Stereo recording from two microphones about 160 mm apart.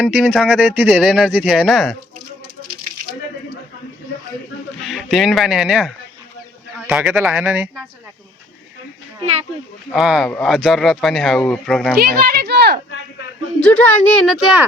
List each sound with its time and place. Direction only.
0.0 s a child's voice: 10° right (ahead or behind)
4.8 s speech: centre (ahead or behind)
9.9 s a child's voice: centre (ahead or behind)
11.9 s a sound: 80° right
13.6 s a woman's voice: 10° left (ahead or behind)